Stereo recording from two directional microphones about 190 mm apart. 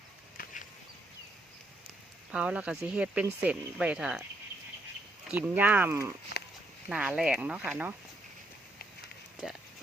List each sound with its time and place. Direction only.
0.3 s a sound: 45° left (ahead or behind)
2.3 s speech: 5° right (ahead or behind)
5.3 s speech: 10° right (ahead or behind)